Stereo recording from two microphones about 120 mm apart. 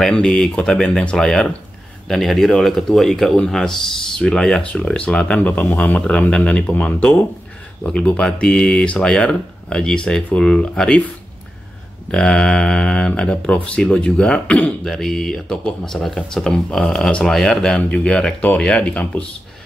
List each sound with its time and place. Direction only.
0.0 s speech: 5° left (ahead or behind)
12.1 s speech: 5° left (ahead or behind)